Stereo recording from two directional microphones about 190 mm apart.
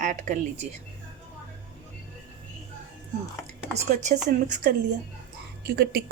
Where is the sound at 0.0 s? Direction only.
40° right (ahead or behind).